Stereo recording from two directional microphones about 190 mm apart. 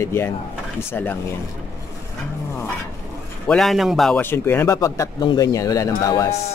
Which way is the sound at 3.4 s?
Centre (ahead or behind).